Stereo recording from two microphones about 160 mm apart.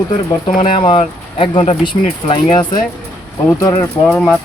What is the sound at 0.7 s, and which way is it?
Speech, 30° left (ahead or behind).